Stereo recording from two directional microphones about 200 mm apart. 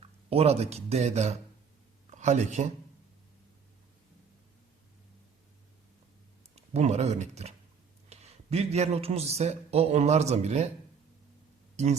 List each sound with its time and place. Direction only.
0.0 s speech: 30° right (ahead or behind)
6.6 s a man's voice: 35° right (ahead or behind)